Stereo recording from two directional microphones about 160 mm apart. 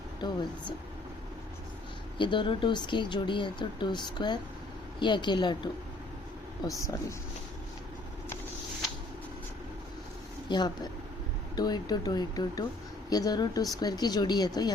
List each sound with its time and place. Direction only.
0.2 s speech: 30° left (ahead or behind)
2.1 s speech: 30° left (ahead or behind)
6.7 s speech: 20° left (ahead or behind)
11.5 s speech: 25° left (ahead or behind)